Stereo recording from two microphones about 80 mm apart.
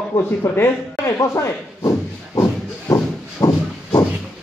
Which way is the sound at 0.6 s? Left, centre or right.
Left.